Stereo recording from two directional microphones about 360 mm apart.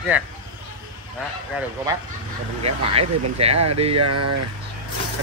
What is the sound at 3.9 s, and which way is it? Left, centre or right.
Speech, right.